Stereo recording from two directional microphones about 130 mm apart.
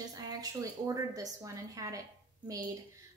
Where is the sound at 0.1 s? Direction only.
30° right (ahead or behind).